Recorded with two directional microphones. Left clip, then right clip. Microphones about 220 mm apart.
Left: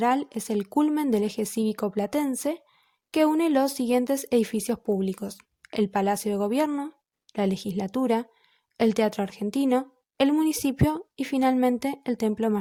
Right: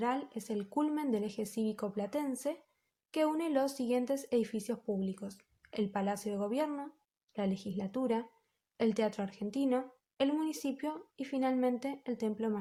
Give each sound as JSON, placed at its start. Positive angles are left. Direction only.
{"t": 0.0, "sound": "speech", "side_deg": 45}